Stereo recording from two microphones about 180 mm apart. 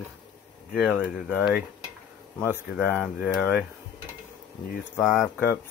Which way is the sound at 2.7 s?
5° right (ahead or behind).